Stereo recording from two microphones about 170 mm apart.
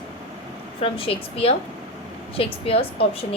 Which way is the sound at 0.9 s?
35° left (ahead or behind).